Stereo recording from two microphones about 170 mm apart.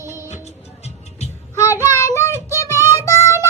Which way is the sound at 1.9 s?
15° left (ahead or behind).